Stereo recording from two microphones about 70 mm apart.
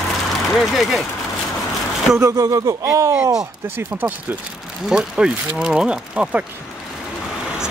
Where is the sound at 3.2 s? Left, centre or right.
Centre.